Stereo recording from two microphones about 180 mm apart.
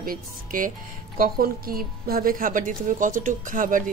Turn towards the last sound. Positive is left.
turn(degrees=-50)  # may be behind; listen again after turning